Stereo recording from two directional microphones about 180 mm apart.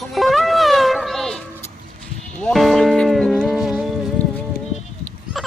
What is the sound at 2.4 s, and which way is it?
Music, centre (ahead or behind).